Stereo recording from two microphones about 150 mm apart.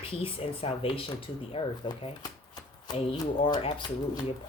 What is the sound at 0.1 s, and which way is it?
Speech, 40° left (ahead or behind).